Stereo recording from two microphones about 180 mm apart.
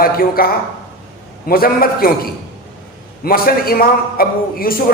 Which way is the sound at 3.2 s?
55° left (ahead or behind).